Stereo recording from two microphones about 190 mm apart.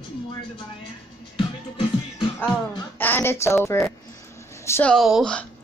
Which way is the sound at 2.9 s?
10° left (ahead or behind).